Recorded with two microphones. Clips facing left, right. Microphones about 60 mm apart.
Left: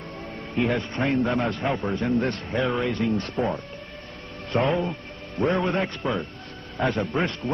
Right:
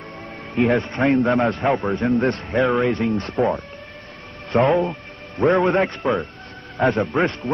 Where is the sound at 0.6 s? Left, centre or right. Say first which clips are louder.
Right 6 dB; right.